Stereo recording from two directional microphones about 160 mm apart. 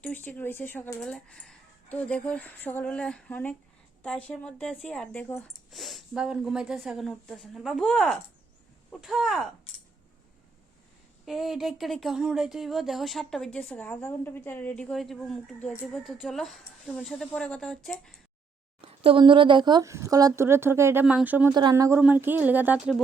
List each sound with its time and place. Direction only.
0.0 s speech: 10° left (ahead or behind)
11.3 s speech: centre (ahead or behind)
18.8 s speech: 35° right (ahead or behind); by 21.5 s 10° right (ahead or behind)
21.5 s speech: 25° right (ahead or behind)